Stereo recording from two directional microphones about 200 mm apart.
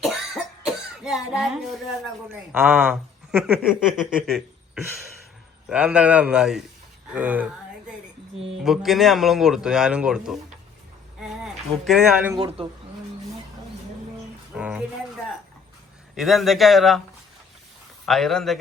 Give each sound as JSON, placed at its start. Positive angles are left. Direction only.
{"t": 0.0, "sound": "cough", "side_deg": 0}
{"t": 2.3, "sound": "speech", "side_deg": -10}
{"t": 12.4, "sound": "a woman's voice", "side_deg": -30}
{"t": 14.5, "sound": "a sound", "side_deg": -5}
{"t": 16.1, "sound": "speech", "side_deg": 0}
{"t": 18.0, "sound": "speech", "side_deg": 0}